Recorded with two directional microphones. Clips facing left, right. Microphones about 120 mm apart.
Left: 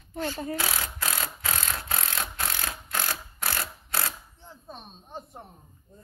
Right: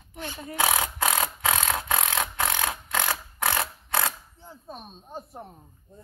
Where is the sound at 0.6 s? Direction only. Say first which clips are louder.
Right 7 dB; 90° right; by 4.1 s 60° right (ahead or behind).